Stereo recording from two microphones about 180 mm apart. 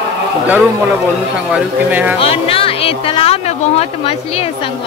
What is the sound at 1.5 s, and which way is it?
Speech, 10° right (ahead or behind).